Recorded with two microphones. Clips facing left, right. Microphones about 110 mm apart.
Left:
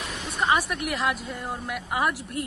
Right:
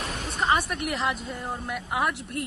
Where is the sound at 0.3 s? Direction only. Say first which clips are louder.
Left 1 dB; centre (ahead or behind).